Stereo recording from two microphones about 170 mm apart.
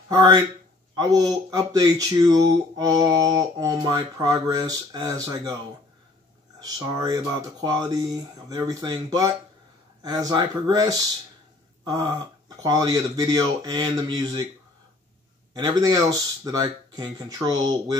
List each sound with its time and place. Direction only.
0.1 s speech: 25° right (ahead or behind)
6.6 s speech: 20° right (ahead or behind)
15.5 s speech: 20° right (ahead or behind)